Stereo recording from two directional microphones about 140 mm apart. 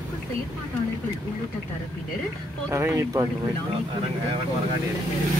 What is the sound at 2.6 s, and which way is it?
Speech, 20° right (ahead or behind).